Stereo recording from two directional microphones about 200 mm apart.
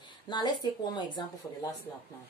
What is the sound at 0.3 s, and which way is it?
Speech, 20° left (ahead or behind).